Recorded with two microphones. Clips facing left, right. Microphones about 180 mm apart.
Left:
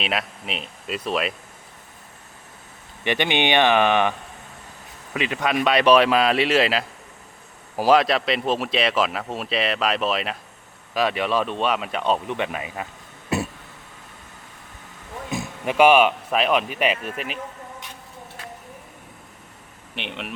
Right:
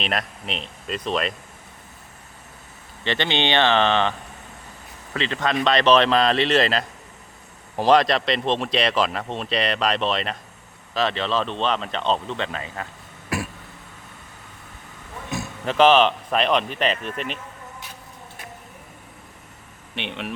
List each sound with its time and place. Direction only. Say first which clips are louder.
0.0 s speech: even; 5° left (ahead or behind)
3.0 s speech: left 2 dB; 15° left (ahead or behind)
5.1 s speech: left 1 dB; 10° left (ahead or behind)
13.3 s throat clearing: left 3 dB; 25° left (ahead or behind)
15.3 s speech: left 1 dB; 15° left (ahead or behind)
20.0 s speech: right 2 dB; 5° left (ahead or behind)